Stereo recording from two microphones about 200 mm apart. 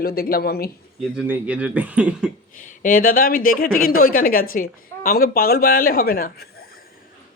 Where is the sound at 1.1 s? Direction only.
5° right (ahead or behind).